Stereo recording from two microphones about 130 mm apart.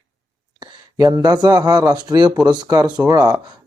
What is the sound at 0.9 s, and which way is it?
A man's voice, 25° right (ahead or behind).